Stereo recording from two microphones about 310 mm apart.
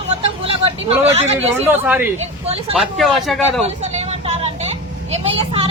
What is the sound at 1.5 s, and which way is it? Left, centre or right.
Speech, centre.